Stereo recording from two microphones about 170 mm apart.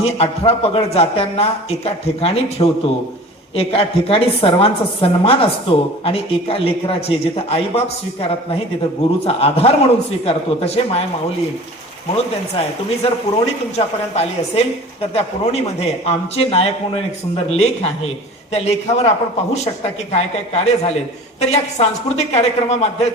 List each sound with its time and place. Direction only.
0.0 s a woman's voice: 35° left (ahead or behind)
12.1 s a woman's voice: 35° left (ahead or behind)
20.1 s a woman's voice: 40° left (ahead or behind)